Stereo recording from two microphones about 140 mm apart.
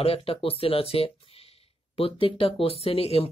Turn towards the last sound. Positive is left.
turn(degrees=45)  # may be behind; listen again after turning